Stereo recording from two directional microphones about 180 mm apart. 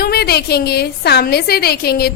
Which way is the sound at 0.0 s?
60° left (ahead or behind).